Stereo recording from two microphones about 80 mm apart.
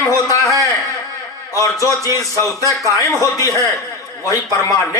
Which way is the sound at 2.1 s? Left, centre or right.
Left.